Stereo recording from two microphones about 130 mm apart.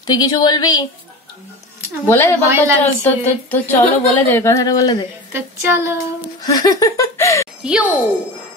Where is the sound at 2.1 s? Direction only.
20° left (ahead or behind).